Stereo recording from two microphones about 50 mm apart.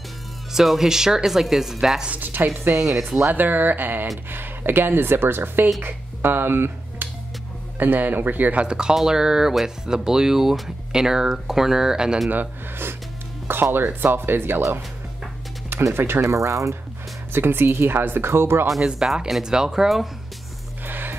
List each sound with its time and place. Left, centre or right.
0.5 s speech: centre
2.0 s speech: right
7.8 s speech: right
8.5 s speech: centre
12.3 s speech: right
15.9 s speech: right
16.2 s speech: right
17.3 s speech: right
19.2 s speech: centre
20.8 s music: right